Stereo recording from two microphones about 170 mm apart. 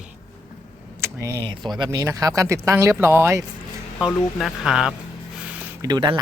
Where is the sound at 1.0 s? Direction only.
15° right (ahead or behind).